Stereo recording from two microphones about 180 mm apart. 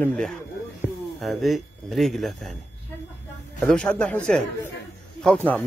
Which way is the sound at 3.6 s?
5° left (ahead or behind).